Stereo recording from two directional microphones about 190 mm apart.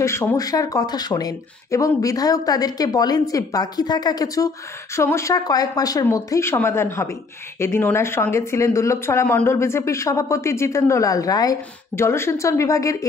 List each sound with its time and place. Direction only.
0.0 s speech: 15° left (ahead or behind)